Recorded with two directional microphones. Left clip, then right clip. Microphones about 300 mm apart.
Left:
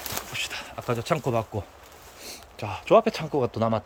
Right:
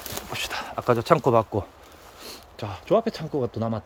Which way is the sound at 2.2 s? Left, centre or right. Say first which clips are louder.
Even; centre.